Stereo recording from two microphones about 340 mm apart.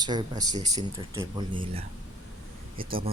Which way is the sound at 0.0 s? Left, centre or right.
Centre.